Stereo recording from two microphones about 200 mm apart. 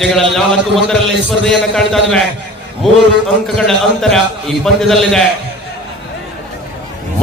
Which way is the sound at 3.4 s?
Centre (ahead or behind).